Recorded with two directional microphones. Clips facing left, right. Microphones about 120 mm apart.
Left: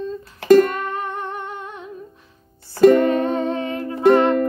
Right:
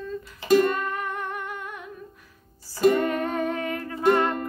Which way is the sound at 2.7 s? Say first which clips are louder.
Left 8 dB; 60° left (ahead or behind).